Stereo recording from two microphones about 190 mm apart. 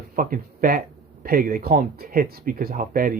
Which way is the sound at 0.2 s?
50° right (ahead or behind).